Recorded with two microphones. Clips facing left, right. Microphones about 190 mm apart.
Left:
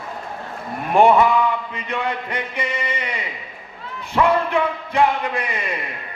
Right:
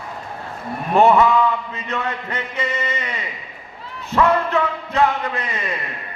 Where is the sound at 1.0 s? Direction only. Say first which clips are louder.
Even; 15° left (ahead or behind).